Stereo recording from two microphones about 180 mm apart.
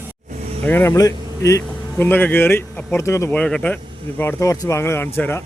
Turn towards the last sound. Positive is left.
turn(degrees=10)  # may be behind; listen again after turning